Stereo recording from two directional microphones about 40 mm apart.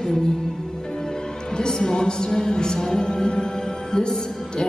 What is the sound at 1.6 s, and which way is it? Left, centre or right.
Music, centre.